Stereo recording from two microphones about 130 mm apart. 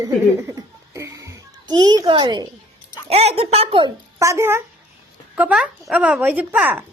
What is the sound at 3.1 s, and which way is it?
Speech, 50° right (ahead or behind).